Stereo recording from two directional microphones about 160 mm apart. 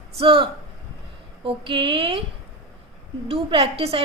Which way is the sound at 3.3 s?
35° right (ahead or behind).